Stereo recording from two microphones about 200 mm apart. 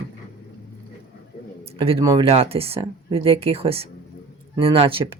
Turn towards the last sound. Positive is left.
turn(degrees=-25)  # may be behind; listen again after turning